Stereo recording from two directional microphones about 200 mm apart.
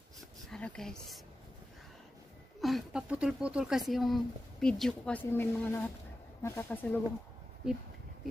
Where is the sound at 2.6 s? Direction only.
Centre (ahead or behind).